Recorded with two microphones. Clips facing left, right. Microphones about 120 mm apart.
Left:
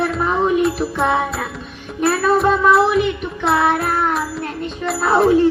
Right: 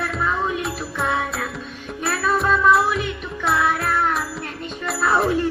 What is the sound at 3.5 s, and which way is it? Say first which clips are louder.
Music: left 5 dB; 60° left (ahead or behind).